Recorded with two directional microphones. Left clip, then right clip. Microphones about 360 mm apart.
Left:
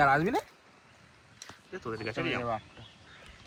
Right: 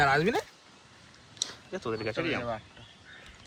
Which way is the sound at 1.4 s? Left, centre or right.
Centre.